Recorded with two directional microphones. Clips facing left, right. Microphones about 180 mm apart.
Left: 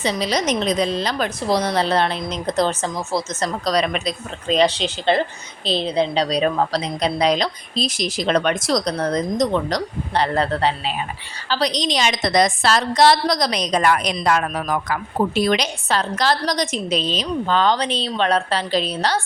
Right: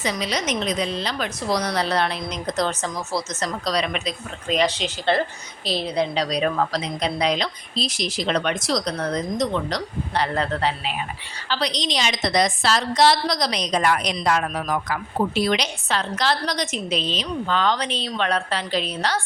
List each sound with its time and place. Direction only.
0.0 s a woman's voice: 30° left (ahead or behind)
1.5 s a woman's voice: 25° left (ahead or behind)
3.7 s a woman's voice: 40° left (ahead or behind)
4.4 s a woman's voice: 30° left (ahead or behind)
5.1 s a woman's voice: 20° left (ahead or behind); by 14.9 s 60° left (ahead or behind)
15.4 s a woman's voice: 45° left (ahead or behind)